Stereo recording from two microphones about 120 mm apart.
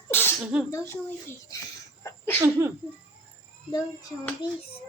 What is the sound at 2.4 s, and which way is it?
Speech, 20° right (ahead or behind).